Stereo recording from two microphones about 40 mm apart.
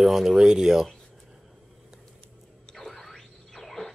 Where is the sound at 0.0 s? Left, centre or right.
Centre.